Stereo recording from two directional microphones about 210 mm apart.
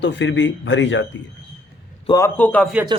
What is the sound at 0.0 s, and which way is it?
Speech, 55° left (ahead or behind).